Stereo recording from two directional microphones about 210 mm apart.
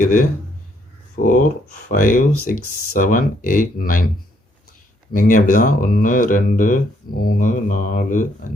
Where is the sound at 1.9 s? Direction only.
40° left (ahead or behind).